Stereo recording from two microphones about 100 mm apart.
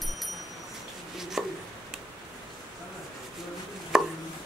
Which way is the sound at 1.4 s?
Centre (ahead or behind).